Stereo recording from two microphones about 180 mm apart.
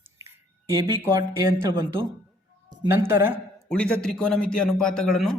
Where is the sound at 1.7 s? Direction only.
25° right (ahead or behind).